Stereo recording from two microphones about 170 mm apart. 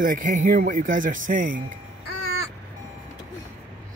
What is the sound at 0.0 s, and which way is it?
Speech, 50° right (ahead or behind).